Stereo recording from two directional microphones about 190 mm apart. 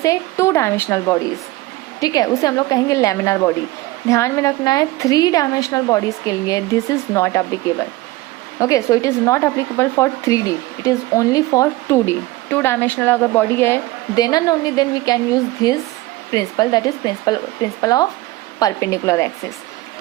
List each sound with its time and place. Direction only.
0.0 s speech: 15° left (ahead or behind)